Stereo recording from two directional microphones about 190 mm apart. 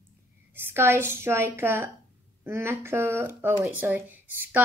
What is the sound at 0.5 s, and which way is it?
A woman's voice, 10° right (ahead or behind).